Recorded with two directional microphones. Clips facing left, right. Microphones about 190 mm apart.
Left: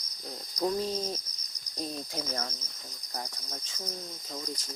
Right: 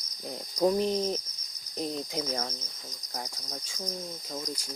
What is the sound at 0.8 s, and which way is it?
Cricket, 20° right (ahead or behind).